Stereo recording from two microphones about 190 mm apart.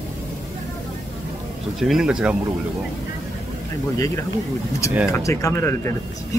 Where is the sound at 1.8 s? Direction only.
Centre (ahead or behind).